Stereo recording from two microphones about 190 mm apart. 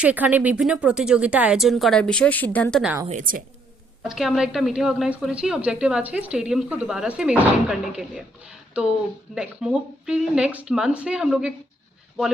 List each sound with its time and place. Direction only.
0.0 s a woman's voice: 10° right (ahead or behind)
3.1 s a woman's voice: 45° right (ahead or behind)
4.1 s a woman's voice: centre (ahead or behind)